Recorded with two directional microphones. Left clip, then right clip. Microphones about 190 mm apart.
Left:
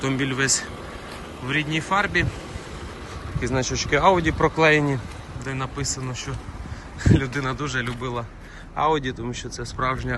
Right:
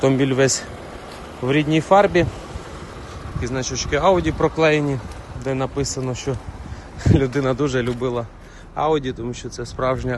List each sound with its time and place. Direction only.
0.0 s a man's voice: 35° right (ahead or behind)
3.4 s speech: 15° right (ahead or behind)
5.4 s a man's voice: 35° right (ahead or behind)